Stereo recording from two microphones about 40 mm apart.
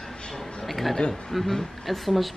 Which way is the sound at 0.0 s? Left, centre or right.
Centre.